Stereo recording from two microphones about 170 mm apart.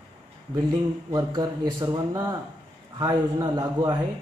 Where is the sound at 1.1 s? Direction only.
25° right (ahead or behind).